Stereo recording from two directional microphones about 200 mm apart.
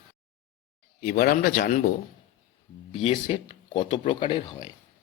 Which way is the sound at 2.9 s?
30° left (ahead or behind).